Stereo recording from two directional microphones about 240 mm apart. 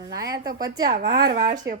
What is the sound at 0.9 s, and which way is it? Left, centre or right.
Speech, right.